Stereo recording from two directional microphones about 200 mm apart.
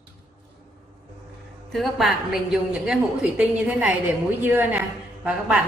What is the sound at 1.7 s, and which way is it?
A woman's voice, centre (ahead or behind).